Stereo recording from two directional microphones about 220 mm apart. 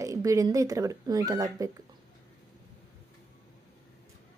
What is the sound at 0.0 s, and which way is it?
A woman's voice, 15° right (ahead or behind).